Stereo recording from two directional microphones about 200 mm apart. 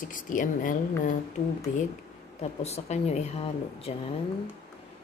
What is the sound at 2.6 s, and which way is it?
Speech, 35° left (ahead or behind).